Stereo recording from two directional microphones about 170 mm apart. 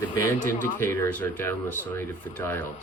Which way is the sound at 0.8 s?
15° left (ahead or behind).